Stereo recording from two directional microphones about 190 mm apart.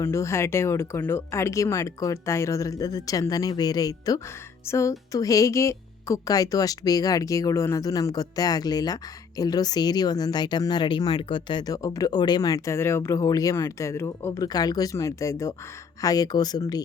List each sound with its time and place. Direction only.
0.0 s speech: 15° left (ahead or behind)